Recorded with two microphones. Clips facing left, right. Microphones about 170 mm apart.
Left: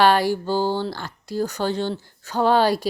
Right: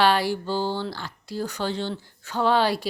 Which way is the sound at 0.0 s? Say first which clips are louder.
Left 4 dB; 45° left (ahead or behind).